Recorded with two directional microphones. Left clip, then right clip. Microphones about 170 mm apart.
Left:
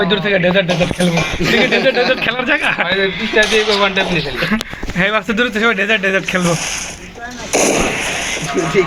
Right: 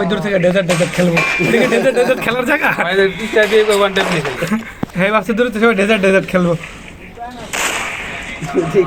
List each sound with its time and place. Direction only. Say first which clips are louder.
0.0 s speech: left 1 dB; 25° right (ahead or behind)
2.2 s speech: even; 15° right (ahead or behind)
4.4 s speech: left 2 dB; 5° right (ahead or behind)
7.7 s fireworks: left 5 dB; 25° right (ahead or behind)
8.6 s speech: right 2 dB; 25° right (ahead or behind)